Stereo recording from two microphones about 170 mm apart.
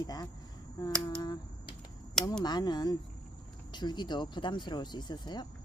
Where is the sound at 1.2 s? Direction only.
25° left (ahead or behind).